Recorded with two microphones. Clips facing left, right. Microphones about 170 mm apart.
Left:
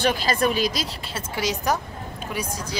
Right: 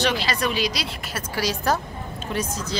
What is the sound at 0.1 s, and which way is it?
Speech, 45° left (ahead or behind).